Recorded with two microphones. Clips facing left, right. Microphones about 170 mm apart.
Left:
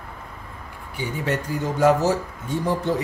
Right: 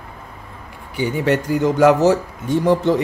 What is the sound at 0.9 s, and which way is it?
A man's voice, 75° right (ahead or behind).